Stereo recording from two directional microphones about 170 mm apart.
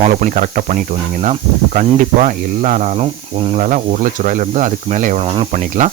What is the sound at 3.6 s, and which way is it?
Speech, 50° right (ahead or behind).